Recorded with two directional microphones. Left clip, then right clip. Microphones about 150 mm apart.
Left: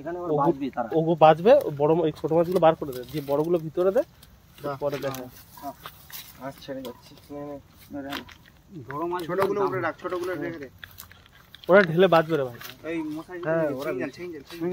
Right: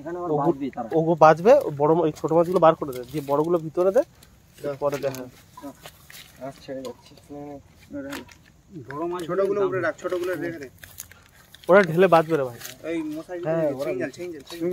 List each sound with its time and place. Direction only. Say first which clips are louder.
0.0 s speech: right 1 dB; 10° right (ahead or behind)
0.3 s speech: even; 30° right (ahead or behind)
7.3 s speech: left 1 dB; centre (ahead or behind)
9.1 s speech: right 2 dB; 5° left (ahead or behind)
11.6 s speech: right 1 dB; 20° right (ahead or behind)
12.8 s speech: right 2 dB; centre (ahead or behind)
13.4 s speech: right 1 dB; 50° right (ahead or behind)
13.9 s speech: right 2 dB; 10° left (ahead or behind)